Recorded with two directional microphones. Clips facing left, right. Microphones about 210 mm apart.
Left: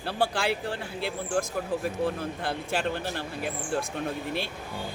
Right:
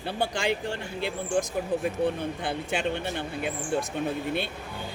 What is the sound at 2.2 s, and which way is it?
Speech, 5° left (ahead or behind).